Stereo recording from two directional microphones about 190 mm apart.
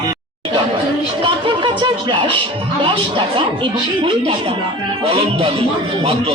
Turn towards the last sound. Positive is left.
turn(degrees=-30)  # may be behind; listen again after turning